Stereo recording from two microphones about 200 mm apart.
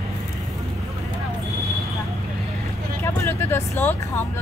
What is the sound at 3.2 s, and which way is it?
Speech, 10° left (ahead or behind).